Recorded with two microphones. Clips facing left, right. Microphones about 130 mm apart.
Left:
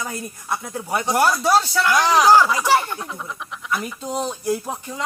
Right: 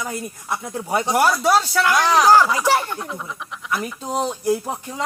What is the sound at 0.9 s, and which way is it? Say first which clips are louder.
Speech: right 1 dB; 20° right (ahead or behind).